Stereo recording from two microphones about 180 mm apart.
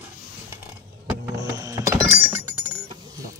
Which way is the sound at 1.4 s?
20° right (ahead or behind).